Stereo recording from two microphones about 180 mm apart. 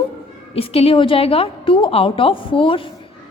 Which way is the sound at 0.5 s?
35° left (ahead or behind).